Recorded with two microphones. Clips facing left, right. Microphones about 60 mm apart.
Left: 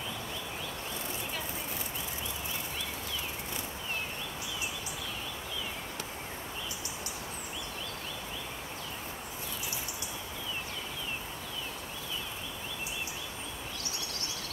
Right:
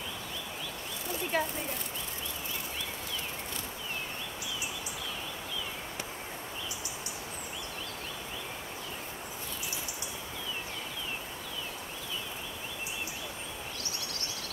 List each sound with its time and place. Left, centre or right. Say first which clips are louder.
1.3 s speech: right 9 dB; right